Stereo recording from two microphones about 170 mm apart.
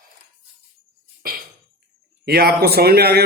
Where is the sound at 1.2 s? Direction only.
60° right (ahead or behind).